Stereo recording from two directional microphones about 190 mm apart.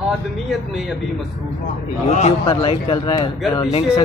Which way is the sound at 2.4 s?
25° left (ahead or behind).